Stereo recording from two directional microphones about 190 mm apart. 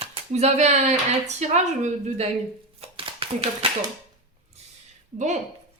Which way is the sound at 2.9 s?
30° right (ahead or behind).